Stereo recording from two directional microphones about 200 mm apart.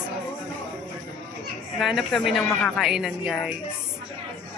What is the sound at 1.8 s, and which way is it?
A woman's voice, centre (ahead or behind).